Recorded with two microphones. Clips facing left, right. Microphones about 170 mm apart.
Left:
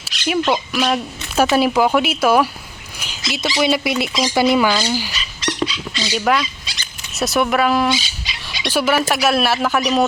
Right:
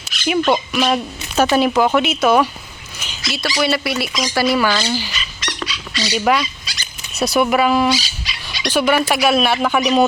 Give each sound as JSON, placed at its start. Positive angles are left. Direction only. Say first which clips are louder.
{"t": 0.0, "sound": "speech", "louder": "right 2 dB", "side_deg": 0}
{"t": 5.1, "sound": "dog", "louder": "left 4 dB", "side_deg": 30}
{"t": 6.1, "sound": "speech", "louder": "right 1 dB", "side_deg": 0}